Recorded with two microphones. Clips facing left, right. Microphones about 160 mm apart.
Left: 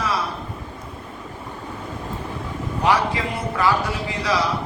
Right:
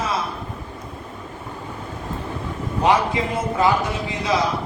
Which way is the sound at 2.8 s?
20° right (ahead or behind).